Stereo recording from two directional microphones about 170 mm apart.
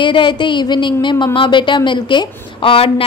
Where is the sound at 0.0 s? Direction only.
30° left (ahead or behind).